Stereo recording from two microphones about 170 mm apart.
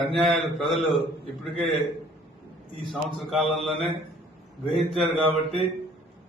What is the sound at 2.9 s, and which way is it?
Speech, centre (ahead or behind).